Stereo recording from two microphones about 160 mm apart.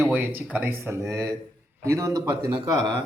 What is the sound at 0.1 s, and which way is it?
A man's voice, 10° right (ahead or behind).